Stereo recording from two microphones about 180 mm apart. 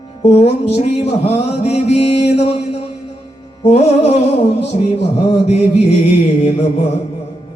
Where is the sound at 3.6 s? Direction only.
35° left (ahead or behind).